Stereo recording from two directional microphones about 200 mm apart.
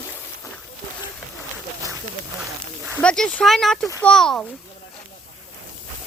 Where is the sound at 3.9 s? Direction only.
15° left (ahead or behind).